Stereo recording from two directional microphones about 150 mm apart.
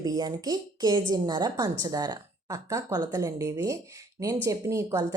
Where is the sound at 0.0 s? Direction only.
25° right (ahead or behind).